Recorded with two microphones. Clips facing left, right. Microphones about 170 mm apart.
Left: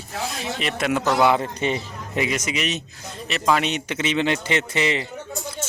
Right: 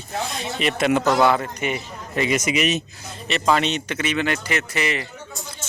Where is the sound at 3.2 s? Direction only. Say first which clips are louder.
Right 1 dB; 5° left (ahead or behind); by 5.0 s 25° left (ahead or behind).